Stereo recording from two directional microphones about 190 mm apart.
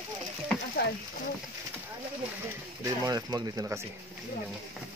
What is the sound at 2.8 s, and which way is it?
Speech, 20° right (ahead or behind).